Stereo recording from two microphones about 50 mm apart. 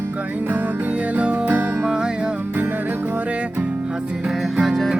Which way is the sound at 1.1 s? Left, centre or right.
Right.